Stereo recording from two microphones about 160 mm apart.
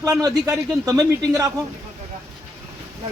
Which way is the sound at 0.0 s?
20° right (ahead or behind).